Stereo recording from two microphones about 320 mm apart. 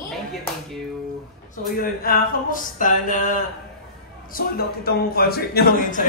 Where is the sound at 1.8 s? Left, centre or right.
Left.